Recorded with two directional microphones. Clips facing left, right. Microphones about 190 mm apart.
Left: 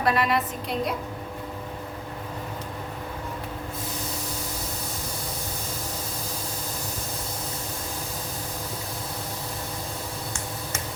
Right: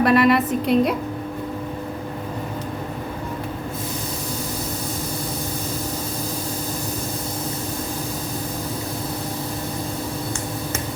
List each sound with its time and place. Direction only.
0.0 s a woman's voice: 65° right (ahead or behind)